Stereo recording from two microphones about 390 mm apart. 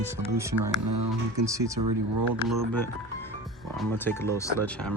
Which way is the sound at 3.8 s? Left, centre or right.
Centre.